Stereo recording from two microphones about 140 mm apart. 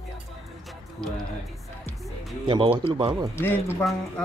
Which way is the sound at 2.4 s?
35° right (ahead or behind).